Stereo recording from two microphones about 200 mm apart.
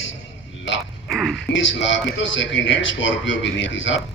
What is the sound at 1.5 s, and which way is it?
A woman's voice, 65° left (ahead or behind).